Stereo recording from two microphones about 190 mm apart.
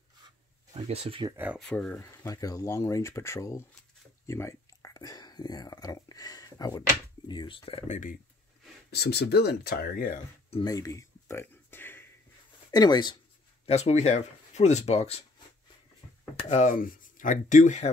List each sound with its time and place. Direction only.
0.7 s speech: 30° right (ahead or behind)
1.3 s speech: 10° right (ahead or behind)
1.6 s speech: 5° left (ahead or behind); by 7.8 s 25° left (ahead or behind)
7.9 s speech: 45° left (ahead or behind)
8.9 s speech: 60° left (ahead or behind)
10.5 s a sound: 20° left (ahead or behind)
12.7 s speech: 20° left (ahead or behind)
13.7 s speech: 35° left (ahead or behind)
16.3 s speech: 35° left (ahead or behind)